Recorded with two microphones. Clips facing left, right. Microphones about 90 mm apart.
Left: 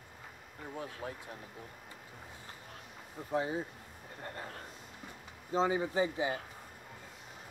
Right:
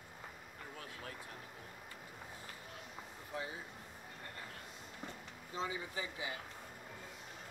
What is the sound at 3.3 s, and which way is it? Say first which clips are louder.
Speech: left 11 dB; 35° left (ahead or behind).